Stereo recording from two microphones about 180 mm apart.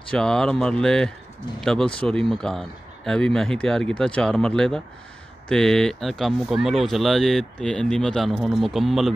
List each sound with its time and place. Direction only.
0.1 s speech: 5° left (ahead or behind)